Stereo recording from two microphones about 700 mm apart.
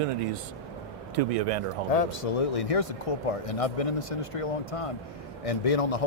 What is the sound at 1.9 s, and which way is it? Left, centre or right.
Speech, left.